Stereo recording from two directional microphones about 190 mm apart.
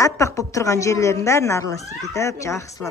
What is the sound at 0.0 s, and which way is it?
A woman's voice, 15° left (ahead or behind).